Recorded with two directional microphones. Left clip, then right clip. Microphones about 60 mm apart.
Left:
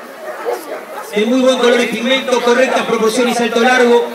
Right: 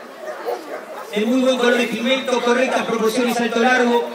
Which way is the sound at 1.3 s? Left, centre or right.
Left.